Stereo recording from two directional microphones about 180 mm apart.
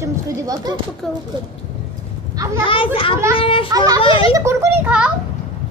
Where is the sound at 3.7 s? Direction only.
20° right (ahead or behind).